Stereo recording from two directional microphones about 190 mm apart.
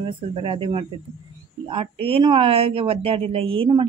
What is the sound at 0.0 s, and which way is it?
Speech, 30° right (ahead or behind).